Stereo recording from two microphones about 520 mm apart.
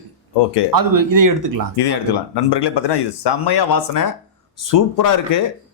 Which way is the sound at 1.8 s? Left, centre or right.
Left.